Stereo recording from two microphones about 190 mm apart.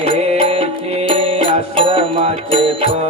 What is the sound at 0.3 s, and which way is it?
Music, 30° right (ahead or behind).